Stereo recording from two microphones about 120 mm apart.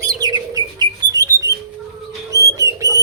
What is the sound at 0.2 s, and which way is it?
Bird, 35° right (ahead or behind).